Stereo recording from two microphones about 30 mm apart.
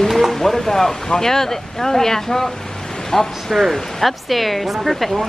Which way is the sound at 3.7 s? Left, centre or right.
Centre.